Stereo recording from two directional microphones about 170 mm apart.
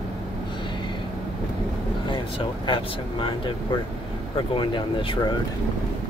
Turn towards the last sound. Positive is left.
turn(degrees=30)  # may be behind; listen again after turning